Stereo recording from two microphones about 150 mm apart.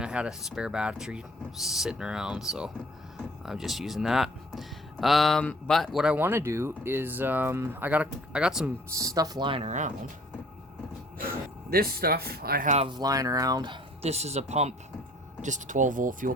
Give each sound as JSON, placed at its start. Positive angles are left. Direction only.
{"t": 0.0, "sound": "speech", "side_deg": -5}
{"t": 8.9, "sound": "speech", "side_deg": -20}
{"t": 9.6, "sound": "speech", "side_deg": -55}
{"t": 11.7, "sound": "speech", "side_deg": -90}
{"t": 12.9, "sound": "speech", "side_deg": -25}
{"t": 14.0, "sound": "speech", "side_deg": -45}